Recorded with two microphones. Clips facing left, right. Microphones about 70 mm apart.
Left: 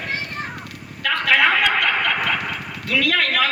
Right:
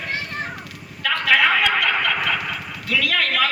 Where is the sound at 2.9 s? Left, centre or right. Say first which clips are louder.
Left 2 dB; left.